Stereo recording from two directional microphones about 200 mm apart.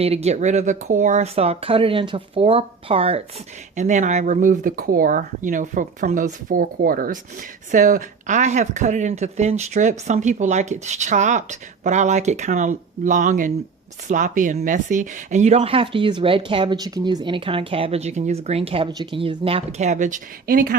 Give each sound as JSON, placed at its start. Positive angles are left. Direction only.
{"t": 0.0, "sound": "speech", "side_deg": -30}